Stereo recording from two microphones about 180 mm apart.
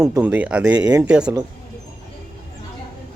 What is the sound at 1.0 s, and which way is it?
Speech, 5° right (ahead or behind).